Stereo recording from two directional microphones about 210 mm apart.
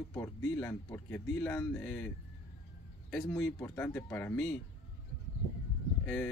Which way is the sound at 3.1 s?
10° left (ahead or behind).